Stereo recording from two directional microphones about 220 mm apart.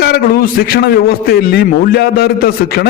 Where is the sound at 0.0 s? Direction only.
45° left (ahead or behind).